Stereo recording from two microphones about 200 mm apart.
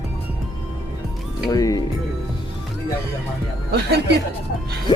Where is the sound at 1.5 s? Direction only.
20° left (ahead or behind).